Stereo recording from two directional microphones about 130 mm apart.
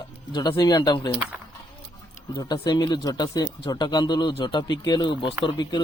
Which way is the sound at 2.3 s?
35° left (ahead or behind).